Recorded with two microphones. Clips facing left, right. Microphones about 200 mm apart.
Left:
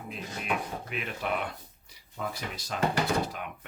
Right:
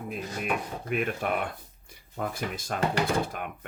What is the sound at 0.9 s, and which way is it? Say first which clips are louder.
Speech: right 6 dB; 50° right (ahead or behind).